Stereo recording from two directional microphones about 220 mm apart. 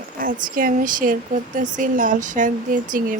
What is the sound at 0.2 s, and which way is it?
A woman's voice, 40° right (ahead or behind).